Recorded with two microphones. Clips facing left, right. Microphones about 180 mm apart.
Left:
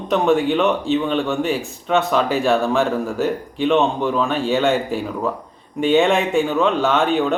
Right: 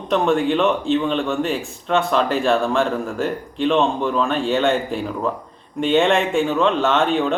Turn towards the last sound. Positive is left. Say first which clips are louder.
# left 1 dB
turn(degrees=0)  # may be behind; listen again after turning